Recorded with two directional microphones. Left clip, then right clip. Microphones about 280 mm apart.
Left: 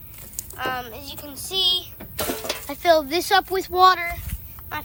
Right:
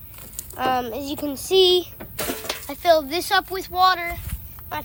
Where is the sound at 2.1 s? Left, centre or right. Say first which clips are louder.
Left 1 dB; centre.